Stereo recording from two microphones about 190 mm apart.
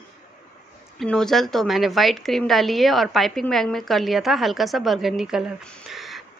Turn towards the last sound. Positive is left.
turn(degrees=0)  # may be behind; listen again after turning